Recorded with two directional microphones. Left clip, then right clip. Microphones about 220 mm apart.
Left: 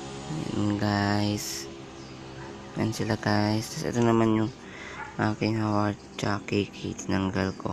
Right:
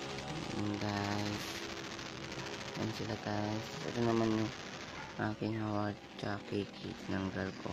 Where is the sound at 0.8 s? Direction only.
20° left (ahead or behind).